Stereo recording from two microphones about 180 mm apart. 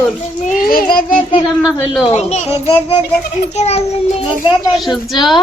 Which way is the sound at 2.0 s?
35° left (ahead or behind).